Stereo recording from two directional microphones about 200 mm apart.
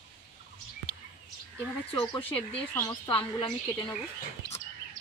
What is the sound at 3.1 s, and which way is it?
Speech, 25° left (ahead or behind).